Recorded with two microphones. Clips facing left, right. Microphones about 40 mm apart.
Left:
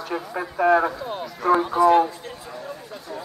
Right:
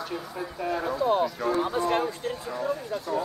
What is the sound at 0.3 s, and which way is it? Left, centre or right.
Speech, left.